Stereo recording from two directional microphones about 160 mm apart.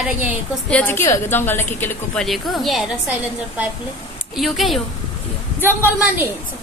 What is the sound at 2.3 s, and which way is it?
Speech, centre (ahead or behind).